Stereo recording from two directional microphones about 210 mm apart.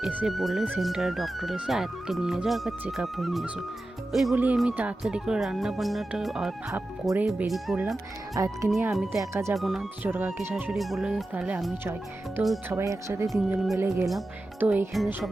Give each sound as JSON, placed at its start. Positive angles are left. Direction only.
{"t": 0.0, "sound": "speech", "side_deg": -5}
{"t": 8.4, "sound": "speech", "side_deg": -15}
{"t": 9.6, "sound": "speech", "side_deg": 0}
{"t": 12.7, "sound": "speech", "side_deg": -15}